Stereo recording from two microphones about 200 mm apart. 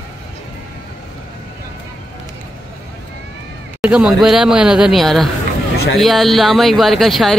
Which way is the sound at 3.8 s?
5° right (ahead or behind).